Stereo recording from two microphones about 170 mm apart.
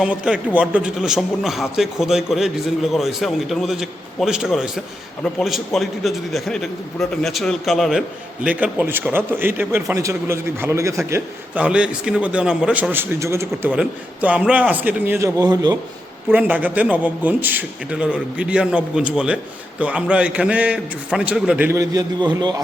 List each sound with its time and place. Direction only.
0.0 s a man's voice: 5° right (ahead or behind)
15.4 s a man's voice: 20° right (ahead or behind)
16.3 s a man's voice: 10° right (ahead or behind); by 22.6 s 25° right (ahead or behind)